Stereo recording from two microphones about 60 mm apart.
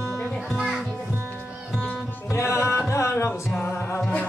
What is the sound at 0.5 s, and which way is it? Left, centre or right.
Music, centre.